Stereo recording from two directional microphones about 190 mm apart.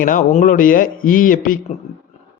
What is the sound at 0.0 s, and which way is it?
A man's voice, 45° left (ahead or behind).